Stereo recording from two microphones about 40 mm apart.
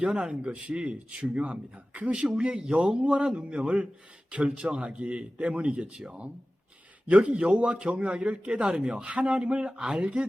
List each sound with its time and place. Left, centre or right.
0.1 s speech: centre